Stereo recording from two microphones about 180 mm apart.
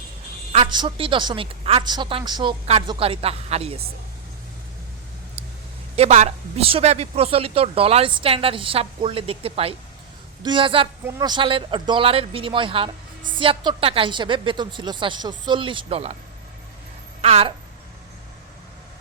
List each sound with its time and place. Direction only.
0.5 s speech: 30° right (ahead or behind)
6.0 s speech: 40° right (ahead or behind)
17.2 s a woman's voice: 35° right (ahead or behind)